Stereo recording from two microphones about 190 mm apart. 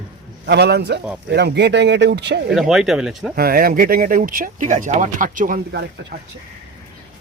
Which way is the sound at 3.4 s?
50° right (ahead or behind).